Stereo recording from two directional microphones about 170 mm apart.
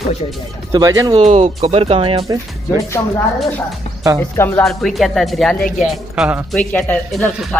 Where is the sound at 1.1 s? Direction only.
40° right (ahead or behind).